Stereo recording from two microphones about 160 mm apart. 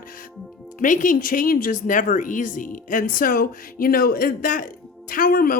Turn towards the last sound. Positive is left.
turn(degrees=65)  # may be behind; listen again after turning